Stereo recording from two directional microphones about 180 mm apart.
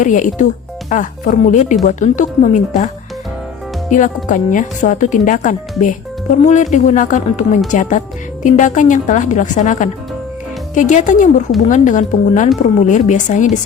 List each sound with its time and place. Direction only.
0.0 s speech: 45° left (ahead or behind)